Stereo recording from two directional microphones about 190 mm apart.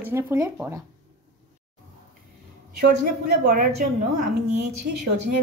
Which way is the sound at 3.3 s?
45° right (ahead or behind).